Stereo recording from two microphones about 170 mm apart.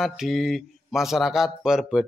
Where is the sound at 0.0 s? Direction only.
Centre (ahead or behind).